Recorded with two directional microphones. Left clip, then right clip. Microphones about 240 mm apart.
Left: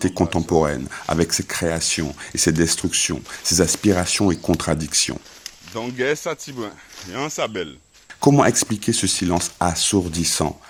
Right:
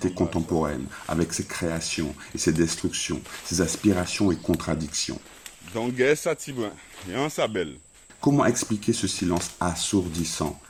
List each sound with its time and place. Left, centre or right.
0.0 s speech: left
5.7 s speech: centre
8.2 s speech: left